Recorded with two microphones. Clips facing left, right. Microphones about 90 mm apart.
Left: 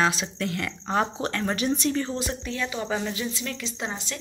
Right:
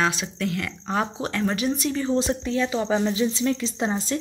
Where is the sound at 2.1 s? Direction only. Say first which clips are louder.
Right 7 dB; 25° right (ahead or behind).